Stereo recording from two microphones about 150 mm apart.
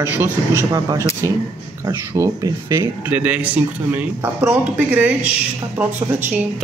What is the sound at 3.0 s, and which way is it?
Speech, 10° right (ahead or behind).